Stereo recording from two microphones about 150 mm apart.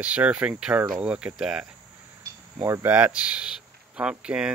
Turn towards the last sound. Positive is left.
turn(degrees=-5)  # may be behind; listen again after turning